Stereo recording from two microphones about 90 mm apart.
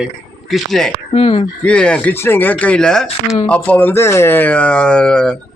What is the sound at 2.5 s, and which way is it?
A man's voice, 10° left (ahead or behind).